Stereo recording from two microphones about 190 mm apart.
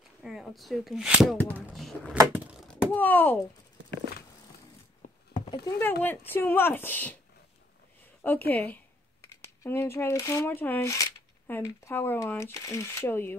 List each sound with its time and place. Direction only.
0.2 s speech: centre (ahead or behind)
2.1 s door: 10° right (ahead or behind)
2.7 s speech: 10° left (ahead or behind)
5.3 s a sound: 30° left (ahead or behind)
5.8 s speech: 10° left (ahead or behind)
8.2 s speech: 10° left (ahead or behind)